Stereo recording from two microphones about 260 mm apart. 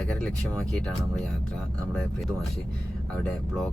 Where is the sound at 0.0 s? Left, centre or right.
Centre.